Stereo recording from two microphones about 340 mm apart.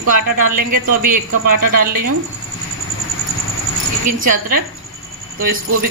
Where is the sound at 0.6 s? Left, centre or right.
Right.